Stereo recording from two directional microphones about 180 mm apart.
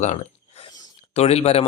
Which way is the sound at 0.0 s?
35° left (ahead or behind).